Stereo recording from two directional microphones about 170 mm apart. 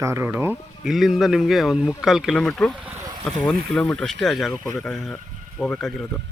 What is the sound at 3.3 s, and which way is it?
Speech, 5° left (ahead or behind).